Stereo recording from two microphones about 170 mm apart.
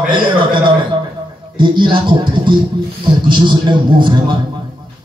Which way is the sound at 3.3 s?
25° right (ahead or behind).